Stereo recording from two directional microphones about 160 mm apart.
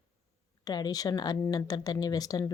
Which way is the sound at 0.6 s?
25° left (ahead or behind).